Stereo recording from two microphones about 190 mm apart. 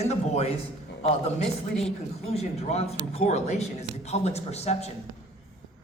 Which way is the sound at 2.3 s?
35° left (ahead or behind).